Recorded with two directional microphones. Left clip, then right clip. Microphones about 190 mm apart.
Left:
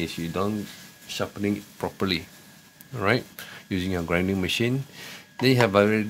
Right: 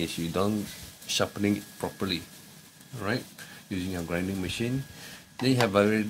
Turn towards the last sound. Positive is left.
turn(degrees=20)  # may be behind; listen again after turning